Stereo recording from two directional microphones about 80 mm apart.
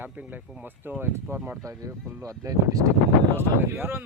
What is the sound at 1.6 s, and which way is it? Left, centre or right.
Speech, right.